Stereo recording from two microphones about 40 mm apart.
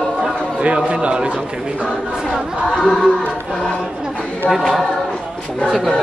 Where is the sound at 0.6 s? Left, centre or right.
Right.